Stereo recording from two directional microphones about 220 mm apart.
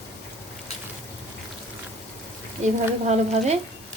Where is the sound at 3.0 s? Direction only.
30° right (ahead or behind).